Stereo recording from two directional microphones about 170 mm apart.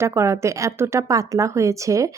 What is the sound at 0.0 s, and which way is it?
A woman's voice, 15° right (ahead or behind).